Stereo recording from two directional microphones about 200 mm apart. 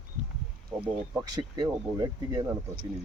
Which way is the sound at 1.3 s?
20° right (ahead or behind).